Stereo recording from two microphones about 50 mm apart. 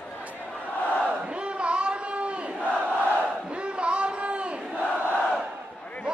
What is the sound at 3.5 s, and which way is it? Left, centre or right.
Battle cry, right.